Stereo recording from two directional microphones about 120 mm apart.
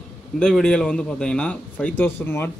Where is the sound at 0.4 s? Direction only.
5° left (ahead or behind).